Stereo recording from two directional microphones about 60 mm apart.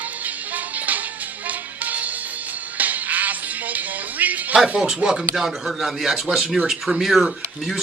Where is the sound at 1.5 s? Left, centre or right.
Right.